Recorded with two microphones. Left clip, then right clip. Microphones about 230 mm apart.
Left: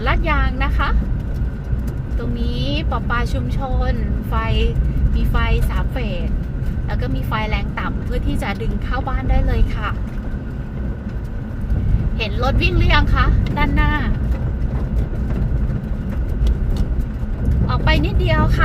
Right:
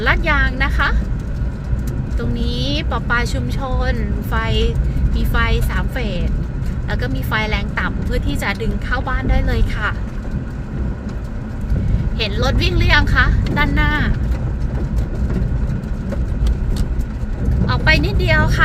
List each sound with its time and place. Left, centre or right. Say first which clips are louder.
0.0 s music: right 4 dB; right
2.5 s a woman's voice: right 2 dB; right
12.2 s a woman's voice: right 1 dB; right
17.7 s a woman's voice: right 4 dB; right